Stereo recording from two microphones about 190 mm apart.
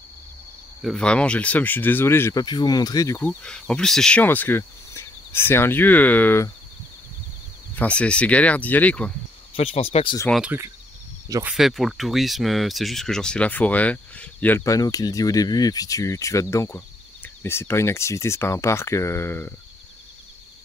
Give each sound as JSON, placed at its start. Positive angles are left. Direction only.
{"t": 0.8, "sound": "speech", "side_deg": 5}
{"t": 7.7, "sound": "speech", "side_deg": 5}
{"t": 9.6, "sound": "speech", "side_deg": 30}
{"t": 10.3, "sound": "cricket", "side_deg": -10}
{"t": 11.5, "sound": "speech", "side_deg": 0}